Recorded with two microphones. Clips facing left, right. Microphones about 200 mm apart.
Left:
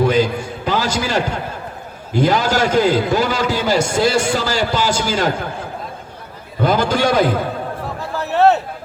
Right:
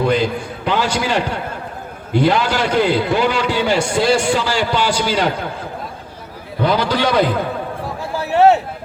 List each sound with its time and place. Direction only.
0.1 s a man's voice: 45° left (ahead or behind)
6.6 s a man's voice: 45° left (ahead or behind)
8.1 s a sound: 10° right (ahead or behind)